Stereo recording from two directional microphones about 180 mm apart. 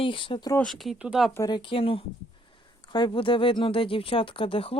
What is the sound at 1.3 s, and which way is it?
Speech, 20° left (ahead or behind).